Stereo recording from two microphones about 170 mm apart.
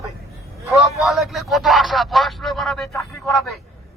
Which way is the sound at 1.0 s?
Centre (ahead or behind).